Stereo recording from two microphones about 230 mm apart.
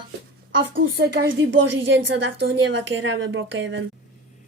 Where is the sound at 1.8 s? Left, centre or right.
Right.